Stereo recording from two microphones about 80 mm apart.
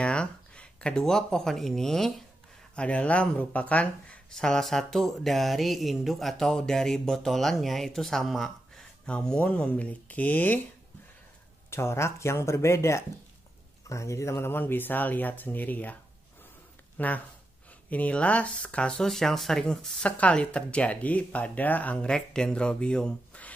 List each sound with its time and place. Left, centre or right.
0.0 s speech: centre
11.7 s speech: left; by 23.5 s centre